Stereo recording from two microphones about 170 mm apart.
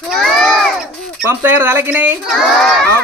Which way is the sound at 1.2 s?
10° right (ahead or behind).